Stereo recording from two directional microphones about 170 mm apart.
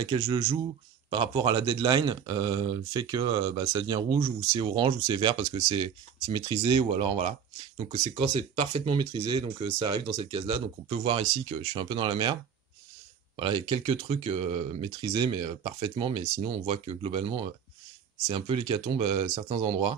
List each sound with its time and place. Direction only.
0.0 s speech: 30° right (ahead or behind)
7.9 s speech: 25° right (ahead or behind)
8.3 s speech: 35° right (ahead or behind)
13.4 s speech: 30° right (ahead or behind)